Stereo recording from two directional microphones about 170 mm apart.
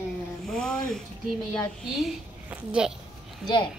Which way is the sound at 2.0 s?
5° right (ahead or behind).